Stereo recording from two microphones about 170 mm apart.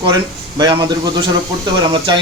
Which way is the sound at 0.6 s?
25° right (ahead or behind).